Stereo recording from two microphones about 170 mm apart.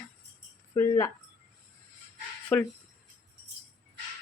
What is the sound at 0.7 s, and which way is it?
Speech, 15° left (ahead or behind).